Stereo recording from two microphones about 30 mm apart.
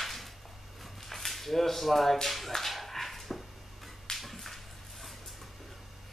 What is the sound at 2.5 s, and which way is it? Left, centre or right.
Dog, centre.